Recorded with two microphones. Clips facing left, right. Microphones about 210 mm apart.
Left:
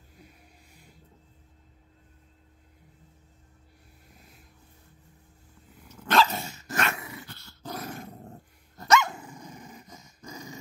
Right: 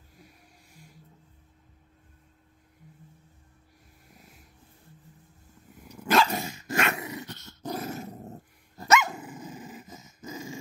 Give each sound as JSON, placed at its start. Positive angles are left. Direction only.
{"t": 5.9, "sound": "dog", "side_deg": -10}